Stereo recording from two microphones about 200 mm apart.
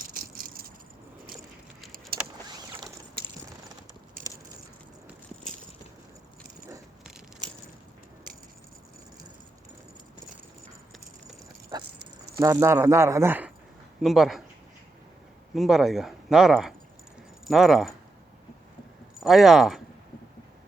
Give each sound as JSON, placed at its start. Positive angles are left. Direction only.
{"t": 0.0, "sound": "a sound", "side_deg": -45}
{"t": 2.1, "sound": "vehicle", "side_deg": -50}
{"t": 11.9, "sound": "keys jangling", "side_deg": -55}
{"t": 12.4, "sound": "speech", "side_deg": -15}
{"t": 15.5, "sound": "speech", "side_deg": 0}
{"t": 19.2, "sound": "speech", "side_deg": 0}